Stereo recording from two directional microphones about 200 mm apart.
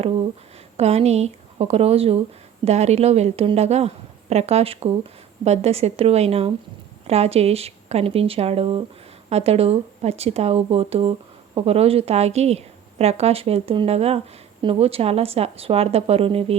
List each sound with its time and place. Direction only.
0.8 s a woman's voice: 30° right (ahead or behind)